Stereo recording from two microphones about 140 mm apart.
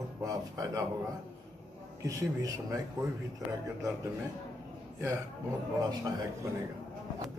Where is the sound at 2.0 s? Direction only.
20° right (ahead or behind).